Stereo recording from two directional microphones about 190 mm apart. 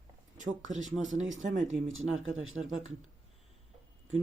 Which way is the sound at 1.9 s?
90° right.